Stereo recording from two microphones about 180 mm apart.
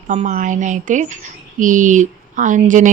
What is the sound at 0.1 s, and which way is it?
Speech, 40° right (ahead or behind).